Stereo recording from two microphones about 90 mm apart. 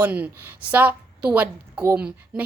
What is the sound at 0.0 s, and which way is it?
A woman's voice, 15° right (ahead or behind).